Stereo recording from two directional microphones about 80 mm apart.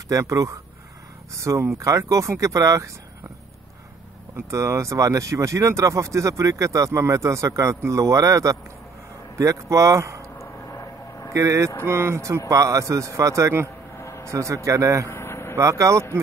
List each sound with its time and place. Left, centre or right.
0.1 s speech: right
4.5 s speech: right
10.4 s vehicle: left
11.3 s speech: right
13.9 s vehicle: left
14.2 s speech: right
15.0 s vehicle: left
15.5 s speech: right